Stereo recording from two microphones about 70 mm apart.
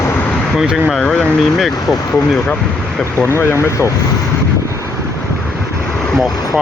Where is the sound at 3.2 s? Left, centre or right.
Left.